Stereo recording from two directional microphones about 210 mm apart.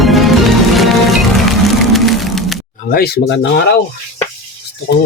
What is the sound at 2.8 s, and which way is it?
Speech, 45° left (ahead or behind).